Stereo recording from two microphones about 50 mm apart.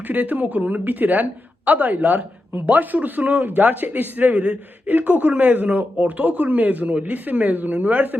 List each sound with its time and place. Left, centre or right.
0.1 s a woman's voice: right